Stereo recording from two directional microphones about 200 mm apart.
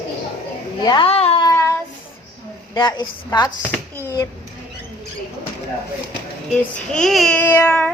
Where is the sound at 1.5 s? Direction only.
15° left (ahead or behind).